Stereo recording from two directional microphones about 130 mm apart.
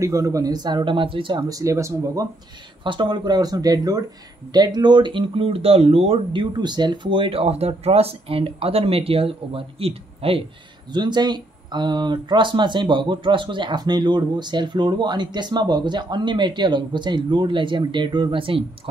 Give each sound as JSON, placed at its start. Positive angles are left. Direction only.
{"t": 0.0, "sound": "speech", "side_deg": -25}
{"t": 1.5, "sound": "speech", "side_deg": -25}
{"t": 2.8, "sound": "speech", "side_deg": -35}
{"t": 6.5, "sound": "speech", "side_deg": -35}
{"t": 10.9, "sound": "speech", "side_deg": -35}